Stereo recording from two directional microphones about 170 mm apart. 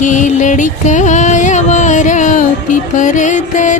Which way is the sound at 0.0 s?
45° left (ahead or behind).